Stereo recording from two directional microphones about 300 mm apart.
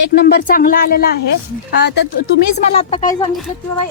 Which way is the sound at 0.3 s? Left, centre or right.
Left.